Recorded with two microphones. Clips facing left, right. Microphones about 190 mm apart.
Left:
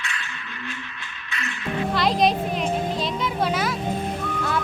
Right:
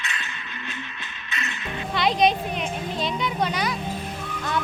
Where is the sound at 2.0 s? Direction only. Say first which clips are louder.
Right 1 dB; centre (ahead or behind).